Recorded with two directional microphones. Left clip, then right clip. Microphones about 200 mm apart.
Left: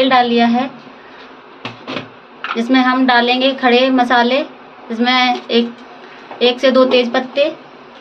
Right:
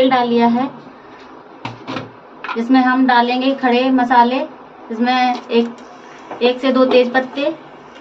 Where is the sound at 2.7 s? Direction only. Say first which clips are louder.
Even; 40° left (ahead or behind).